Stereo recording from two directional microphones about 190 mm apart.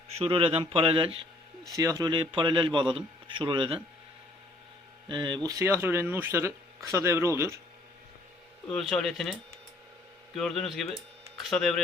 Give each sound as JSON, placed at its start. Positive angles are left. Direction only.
{"t": 0.2, "sound": "a man's voice", "side_deg": -30}
{"t": 1.6, "sound": "a man's voice", "side_deg": -15}
{"t": 5.0, "sound": "speech", "side_deg": -25}
{"t": 8.7, "sound": "speech", "side_deg": 0}
{"t": 10.3, "sound": "speech", "side_deg": 0}